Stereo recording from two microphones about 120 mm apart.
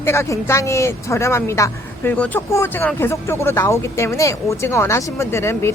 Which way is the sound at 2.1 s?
10° left (ahead or behind).